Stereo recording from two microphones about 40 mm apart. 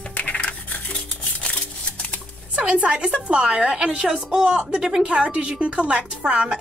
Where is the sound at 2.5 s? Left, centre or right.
Right.